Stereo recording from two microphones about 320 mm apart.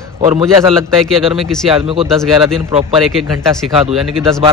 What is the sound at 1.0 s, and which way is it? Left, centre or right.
Speech, centre.